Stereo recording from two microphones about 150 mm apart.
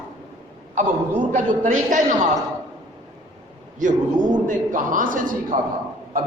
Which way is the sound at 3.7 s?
60° right (ahead or behind).